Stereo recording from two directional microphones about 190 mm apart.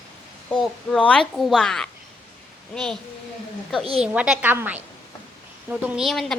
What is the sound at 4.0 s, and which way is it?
A woman's voice, 5° right (ahead or behind).